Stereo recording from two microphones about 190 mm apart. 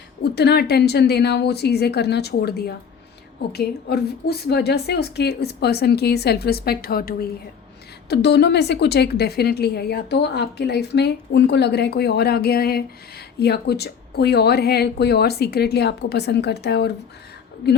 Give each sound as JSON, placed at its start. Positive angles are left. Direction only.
{"t": 0.2, "sound": "a woman's voice", "side_deg": 60}